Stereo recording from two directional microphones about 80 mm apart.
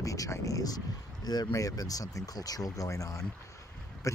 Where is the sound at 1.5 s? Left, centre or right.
Left.